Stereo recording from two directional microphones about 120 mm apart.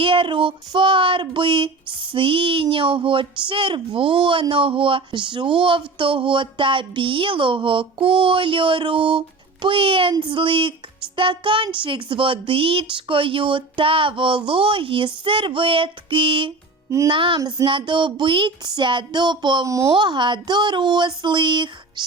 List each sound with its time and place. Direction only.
0.0 s a sound: 45° right (ahead or behind)
17.7 s speech: 45° right (ahead or behind)
19.6 s speech: 25° right (ahead or behind)
19.9 s speech: 40° right (ahead or behind)